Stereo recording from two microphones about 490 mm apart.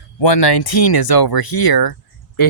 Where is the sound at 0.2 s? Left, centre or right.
Left.